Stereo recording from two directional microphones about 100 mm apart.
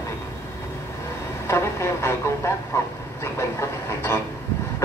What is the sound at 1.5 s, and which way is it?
A man's voice, 25° left (ahead or behind).